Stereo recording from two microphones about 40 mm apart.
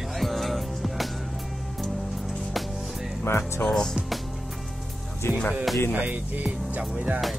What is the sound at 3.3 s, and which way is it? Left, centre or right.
Speech, left.